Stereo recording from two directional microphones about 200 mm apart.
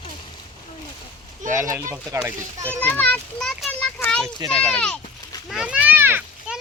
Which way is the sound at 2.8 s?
5° left (ahead or behind).